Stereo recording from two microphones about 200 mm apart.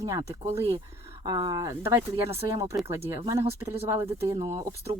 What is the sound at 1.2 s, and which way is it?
Speech, 20° right (ahead or behind).